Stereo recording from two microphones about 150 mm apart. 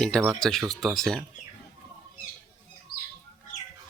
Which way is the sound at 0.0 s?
5° left (ahead or behind).